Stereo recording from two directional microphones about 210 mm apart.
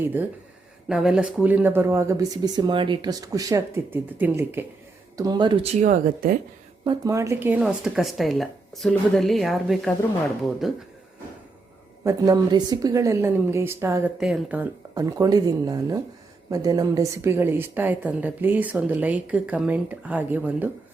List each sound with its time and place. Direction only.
0.0 s a woman's voice: 10° right (ahead or behind)
5.8 s speech: 40° right (ahead or behind)
6.8 s speech: 15° right (ahead or behind)
12.0 s a woman's voice: 15° right (ahead or behind)